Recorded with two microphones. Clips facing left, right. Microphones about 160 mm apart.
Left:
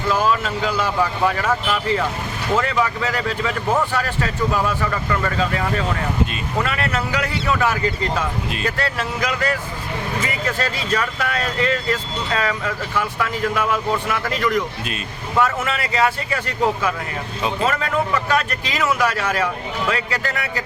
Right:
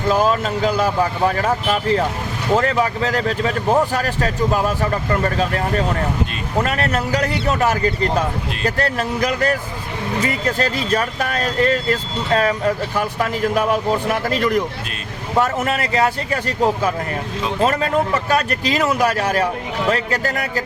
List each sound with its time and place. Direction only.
0.1 s speech: 40° right (ahead or behind)
17.7 s speech: 30° right (ahead or behind)